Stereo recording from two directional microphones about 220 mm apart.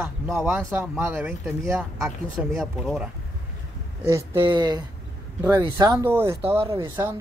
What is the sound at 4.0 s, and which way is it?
Speech, 10° right (ahead or behind).